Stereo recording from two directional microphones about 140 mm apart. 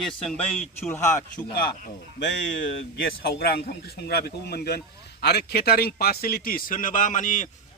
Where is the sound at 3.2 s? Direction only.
90° left.